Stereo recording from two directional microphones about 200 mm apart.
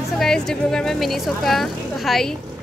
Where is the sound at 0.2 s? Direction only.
Centre (ahead or behind).